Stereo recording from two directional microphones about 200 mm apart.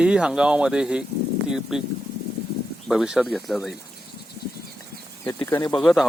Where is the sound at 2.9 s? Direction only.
Centre (ahead or behind).